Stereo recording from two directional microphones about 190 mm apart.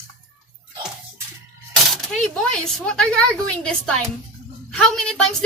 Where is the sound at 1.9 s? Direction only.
Centre (ahead or behind).